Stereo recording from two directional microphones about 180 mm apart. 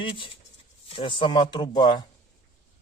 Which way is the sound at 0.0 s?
30° left (ahead or behind).